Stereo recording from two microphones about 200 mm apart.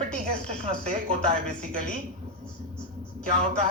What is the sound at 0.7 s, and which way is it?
A man's voice, 40° right (ahead or behind).